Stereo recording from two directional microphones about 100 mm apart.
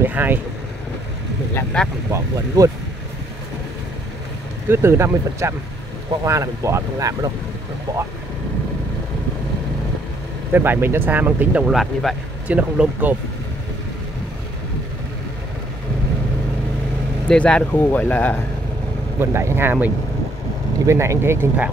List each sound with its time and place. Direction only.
0.0 s speech: 20° right (ahead or behind)
1.5 s speech: 15° left (ahead or behind)
2.0 s speech: 30° right (ahead or behind)
4.6 s speech: 25° right (ahead or behind)
10.5 s speech: 20° right (ahead or behind)
11.7 s speech: centre (ahead or behind)
12.4 s speech: 15° right (ahead or behind)
17.3 s speech: 10° left (ahead or behind)
19.1 s speech: 25° right (ahead or behind)